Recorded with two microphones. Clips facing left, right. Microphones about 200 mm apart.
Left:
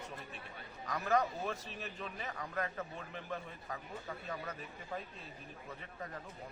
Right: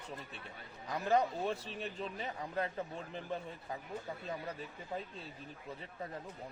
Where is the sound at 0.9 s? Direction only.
30° right (ahead or behind).